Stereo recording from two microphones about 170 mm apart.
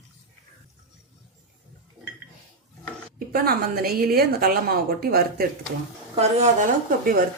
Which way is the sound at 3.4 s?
65° right (ahead or behind).